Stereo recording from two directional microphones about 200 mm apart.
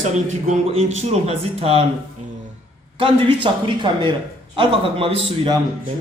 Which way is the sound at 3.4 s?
25° right (ahead or behind).